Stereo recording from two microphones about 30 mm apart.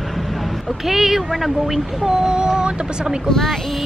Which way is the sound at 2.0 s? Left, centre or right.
Right.